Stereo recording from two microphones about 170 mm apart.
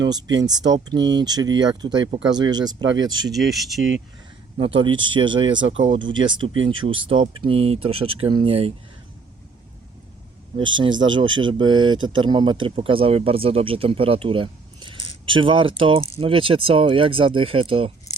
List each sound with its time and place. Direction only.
0.0 s speech: 25° right (ahead or behind)
2.9 s speech: 90° right
3.3 s speech: centre (ahead or behind)
4.5 s speech: 30° right (ahead or behind)
11.1 s speech: 25° right (ahead or behind)